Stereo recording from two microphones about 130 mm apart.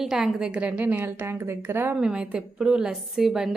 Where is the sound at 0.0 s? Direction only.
5° right (ahead or behind); by 2.0 s 20° right (ahead or behind).